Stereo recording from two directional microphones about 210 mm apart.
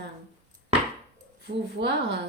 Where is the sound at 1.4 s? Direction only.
55° right (ahead or behind).